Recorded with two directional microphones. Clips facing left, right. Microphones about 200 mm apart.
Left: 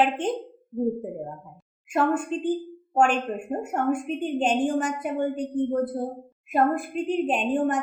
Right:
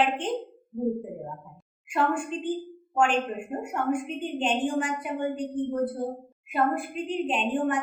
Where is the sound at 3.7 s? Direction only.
40° left (ahead or behind).